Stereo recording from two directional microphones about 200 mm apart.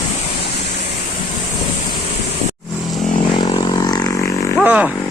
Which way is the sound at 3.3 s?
20° left (ahead or behind).